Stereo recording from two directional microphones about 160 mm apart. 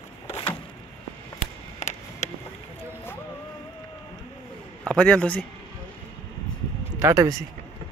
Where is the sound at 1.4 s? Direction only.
45° left (ahead or behind).